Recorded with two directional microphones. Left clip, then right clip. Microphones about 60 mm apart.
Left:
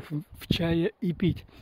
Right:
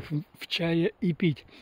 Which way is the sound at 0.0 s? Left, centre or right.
Left.